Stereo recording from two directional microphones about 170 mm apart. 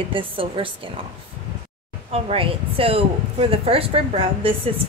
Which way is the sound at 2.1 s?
35° right (ahead or behind).